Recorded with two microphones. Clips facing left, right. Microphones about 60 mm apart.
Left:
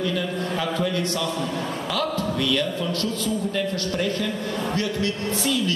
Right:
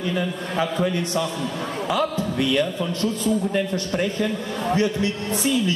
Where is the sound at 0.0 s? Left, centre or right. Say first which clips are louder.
Even; right.